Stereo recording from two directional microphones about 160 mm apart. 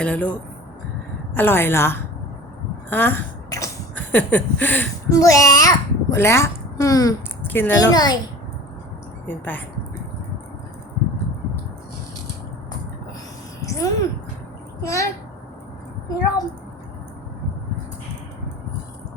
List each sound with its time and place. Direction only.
0.0 s a woman's voice: 10° left (ahead or behind)
5.0 s a child's voice: 20° left (ahead or behind)
7.9 s a child's voice: 25° left (ahead or behind)
9.2 s a woman's voice: 10° left (ahead or behind)
13.6 s a sound: 20° left (ahead or behind)
14.8 s a child's voice: 20° left (ahead or behind)